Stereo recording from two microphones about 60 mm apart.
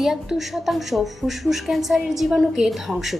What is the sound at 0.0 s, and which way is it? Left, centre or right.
Speech, centre.